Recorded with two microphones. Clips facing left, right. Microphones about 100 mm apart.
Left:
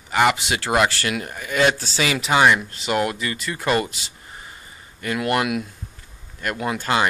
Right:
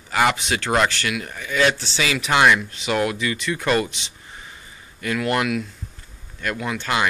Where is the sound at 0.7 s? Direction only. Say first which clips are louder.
Left 1 dB; 10° left (ahead or behind).